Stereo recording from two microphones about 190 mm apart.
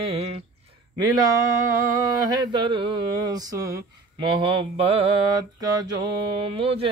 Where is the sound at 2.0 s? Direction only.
20° right (ahead or behind).